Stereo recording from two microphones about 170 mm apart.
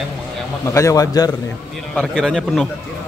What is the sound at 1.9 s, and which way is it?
Speech, 5° left (ahead or behind).